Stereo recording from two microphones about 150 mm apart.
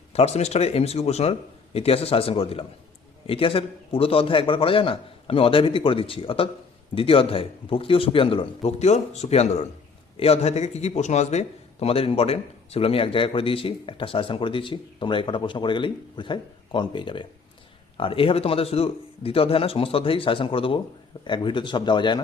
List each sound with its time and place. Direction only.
0.1 s a man's voice: 45° left (ahead or behind)